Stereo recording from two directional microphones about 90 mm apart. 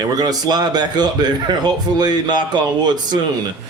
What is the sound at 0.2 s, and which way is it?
A man's voice, 50° right (ahead or behind).